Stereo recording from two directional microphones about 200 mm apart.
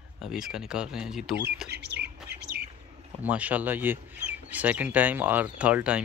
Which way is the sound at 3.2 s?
5° right (ahead or behind).